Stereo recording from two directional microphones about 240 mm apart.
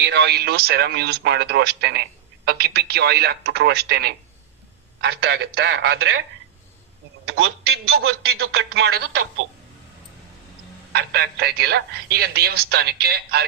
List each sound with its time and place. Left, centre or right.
0.0 s a man's voice: right
7.3 s a man's voice: right
10.9 s speech: right